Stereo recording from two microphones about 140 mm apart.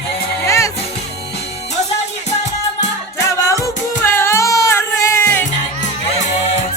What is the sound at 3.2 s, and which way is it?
Music, 20° left (ahead or behind).